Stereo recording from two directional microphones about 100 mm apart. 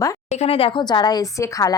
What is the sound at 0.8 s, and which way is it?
Speech, 45° left (ahead or behind).